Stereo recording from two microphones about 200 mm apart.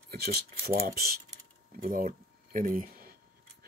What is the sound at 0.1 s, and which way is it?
Speech, 50° right (ahead or behind).